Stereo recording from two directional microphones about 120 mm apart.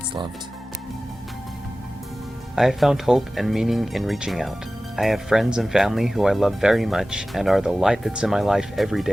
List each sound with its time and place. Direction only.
2.6 s speech: centre (ahead or behind)